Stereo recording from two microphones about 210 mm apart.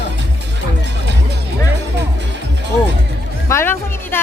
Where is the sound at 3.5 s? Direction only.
10° left (ahead or behind).